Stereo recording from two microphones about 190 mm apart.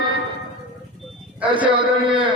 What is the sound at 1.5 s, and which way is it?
Speech, 25° right (ahead or behind).